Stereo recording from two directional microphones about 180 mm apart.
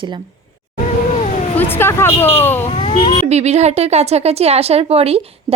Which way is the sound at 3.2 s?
35° right (ahead or behind).